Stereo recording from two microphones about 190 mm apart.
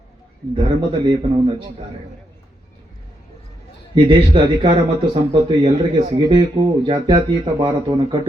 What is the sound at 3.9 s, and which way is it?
Speech, 25° right (ahead or behind).